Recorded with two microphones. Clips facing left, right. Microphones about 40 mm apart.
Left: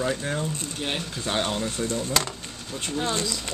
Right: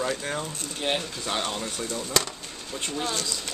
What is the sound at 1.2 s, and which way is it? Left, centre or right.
Speech, centre.